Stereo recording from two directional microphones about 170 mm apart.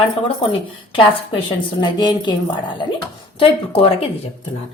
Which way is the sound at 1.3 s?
25° left (ahead or behind).